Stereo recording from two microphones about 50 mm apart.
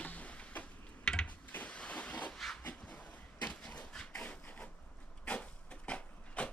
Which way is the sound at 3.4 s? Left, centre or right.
Left.